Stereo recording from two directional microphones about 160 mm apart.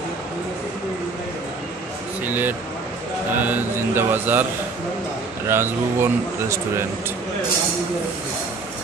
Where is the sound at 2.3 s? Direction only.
10° right (ahead or behind).